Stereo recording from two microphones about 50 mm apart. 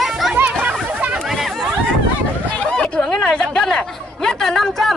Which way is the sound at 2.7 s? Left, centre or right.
Centre.